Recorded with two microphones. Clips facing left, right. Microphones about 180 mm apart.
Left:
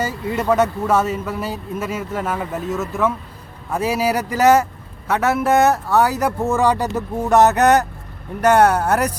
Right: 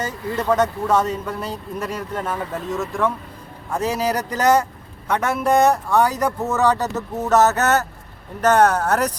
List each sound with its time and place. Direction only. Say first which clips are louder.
0.0 s speech: left 2 dB; 10° left (ahead or behind)